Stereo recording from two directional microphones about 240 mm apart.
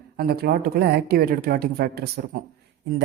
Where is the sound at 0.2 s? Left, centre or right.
Right.